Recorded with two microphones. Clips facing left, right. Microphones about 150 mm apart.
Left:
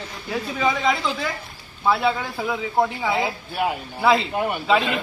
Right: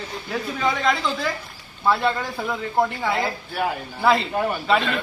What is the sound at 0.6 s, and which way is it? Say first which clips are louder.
A man's voice: left 1 dB; 5° left (ahead or behind).